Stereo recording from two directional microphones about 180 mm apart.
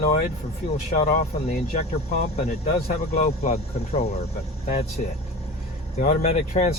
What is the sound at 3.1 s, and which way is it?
Speech, 35° left (ahead or behind).